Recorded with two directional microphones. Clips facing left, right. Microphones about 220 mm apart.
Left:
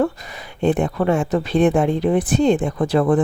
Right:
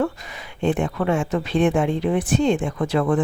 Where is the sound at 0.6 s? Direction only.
35° left (ahead or behind).